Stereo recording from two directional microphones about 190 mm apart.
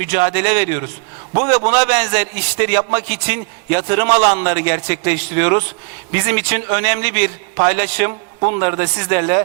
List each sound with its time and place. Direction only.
0.0 s a man's voice: 15° right (ahead or behind)